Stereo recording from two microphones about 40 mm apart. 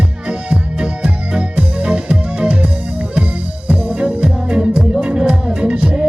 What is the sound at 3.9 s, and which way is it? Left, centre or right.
Music, right.